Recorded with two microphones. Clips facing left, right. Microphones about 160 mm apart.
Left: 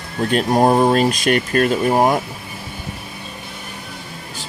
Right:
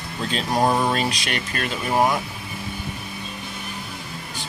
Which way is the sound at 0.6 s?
40° left (ahead or behind).